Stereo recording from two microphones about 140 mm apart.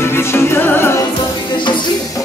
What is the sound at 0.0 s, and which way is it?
Music, 15° left (ahead or behind).